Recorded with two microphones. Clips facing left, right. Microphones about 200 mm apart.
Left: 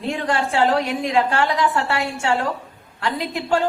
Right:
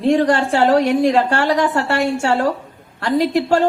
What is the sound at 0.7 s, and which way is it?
Speech, 45° right (ahead or behind).